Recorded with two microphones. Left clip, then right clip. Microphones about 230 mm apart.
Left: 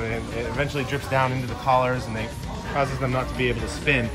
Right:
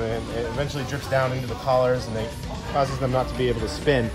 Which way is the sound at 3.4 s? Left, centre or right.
Right.